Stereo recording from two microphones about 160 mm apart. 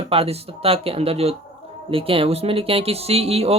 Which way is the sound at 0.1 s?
35° right (ahead or behind).